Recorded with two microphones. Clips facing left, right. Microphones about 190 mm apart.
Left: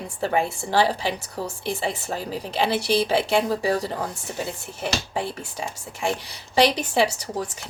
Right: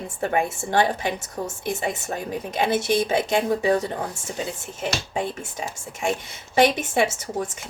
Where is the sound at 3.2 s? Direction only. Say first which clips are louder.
Right 1 dB; 20° right (ahead or behind).